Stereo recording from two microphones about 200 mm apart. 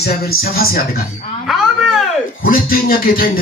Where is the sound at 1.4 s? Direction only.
Centre (ahead or behind).